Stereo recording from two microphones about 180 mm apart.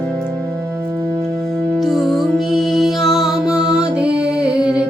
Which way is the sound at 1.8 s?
Centre (ahead or behind).